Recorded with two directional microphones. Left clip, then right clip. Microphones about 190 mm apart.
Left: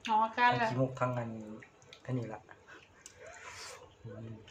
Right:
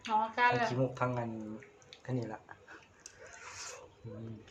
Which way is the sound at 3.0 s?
20° right (ahead or behind).